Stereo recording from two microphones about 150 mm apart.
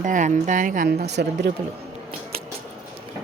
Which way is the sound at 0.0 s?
55° right (ahead or behind).